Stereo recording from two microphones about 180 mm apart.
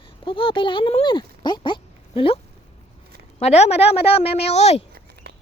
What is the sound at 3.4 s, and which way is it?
A woman's voice, 35° left (ahead or behind).